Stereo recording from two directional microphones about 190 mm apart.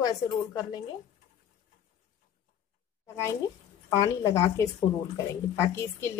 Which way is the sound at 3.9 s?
15° left (ahead or behind).